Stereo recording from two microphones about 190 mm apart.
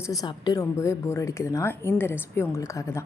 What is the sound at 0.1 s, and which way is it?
A woman's voice, 20° left (ahead or behind).